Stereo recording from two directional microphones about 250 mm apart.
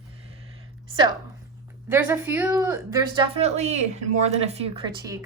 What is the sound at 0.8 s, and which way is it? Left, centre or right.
A woman's voice, centre.